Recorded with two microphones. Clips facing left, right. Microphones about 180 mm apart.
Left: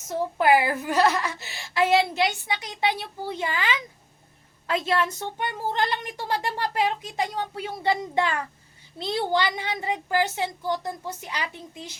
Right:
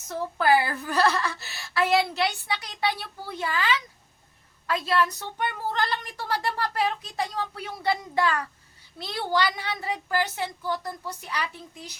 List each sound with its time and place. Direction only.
0.3 s a woman's voice: 20° left (ahead or behind)